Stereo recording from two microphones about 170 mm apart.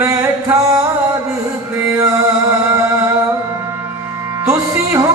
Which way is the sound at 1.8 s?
15° right (ahead or behind).